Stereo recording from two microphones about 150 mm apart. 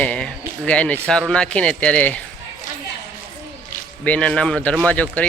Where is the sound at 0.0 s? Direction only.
10° left (ahead or behind).